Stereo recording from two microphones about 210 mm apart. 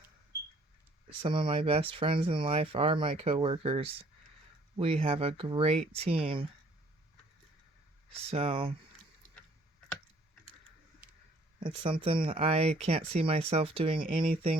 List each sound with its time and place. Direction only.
1.2 s speech: 25° right (ahead or behind)
8.1 s speech: 30° right (ahead or behind)
11.6 s speech: 25° right (ahead or behind)